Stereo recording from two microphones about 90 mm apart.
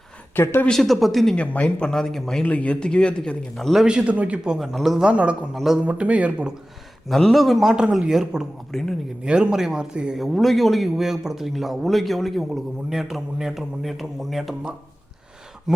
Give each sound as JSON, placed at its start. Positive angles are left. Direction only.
{"t": 0.3, "sound": "speech", "side_deg": 25}
{"t": 0.7, "sound": "a man's voice", "side_deg": 5}
{"t": 2.4, "sound": "speech", "side_deg": 15}
{"t": 3.8, "sound": "a man's voice", "side_deg": -10}
{"t": 5.5, "sound": "a man's voice", "side_deg": -5}
{"t": 5.8, "sound": "a man's voice", "side_deg": -15}
{"t": 7.1, "sound": "a man's voice", "side_deg": 5}
{"t": 9.2, "sound": "a man's voice", "side_deg": -10}